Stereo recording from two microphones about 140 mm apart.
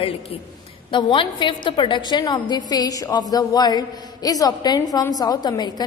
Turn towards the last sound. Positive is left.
turn(degrees=30)  # may be behind; listen again after turning